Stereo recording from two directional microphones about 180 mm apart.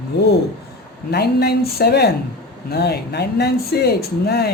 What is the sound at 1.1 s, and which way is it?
Speech, 60° left (ahead or behind).